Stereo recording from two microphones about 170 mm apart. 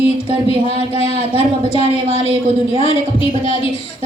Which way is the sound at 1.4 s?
40° left (ahead or behind).